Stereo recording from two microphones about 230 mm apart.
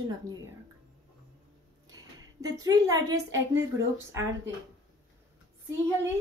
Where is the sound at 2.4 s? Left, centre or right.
Centre.